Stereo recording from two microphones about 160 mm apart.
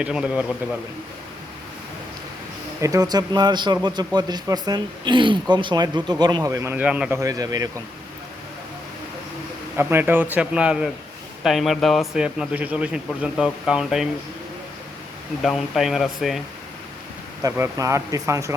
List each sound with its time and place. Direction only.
0.0 s a man's voice: 5° right (ahead or behind)
2.8 s speech: 20° right (ahead or behind)
9.7 s a man's voice: 15° right (ahead or behind)
15.4 s speech: centre (ahead or behind)
17.4 s speech: 20° right (ahead or behind)